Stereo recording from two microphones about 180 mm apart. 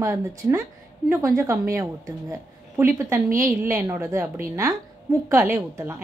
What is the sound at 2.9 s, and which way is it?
A woman's voice, 15° right (ahead or behind).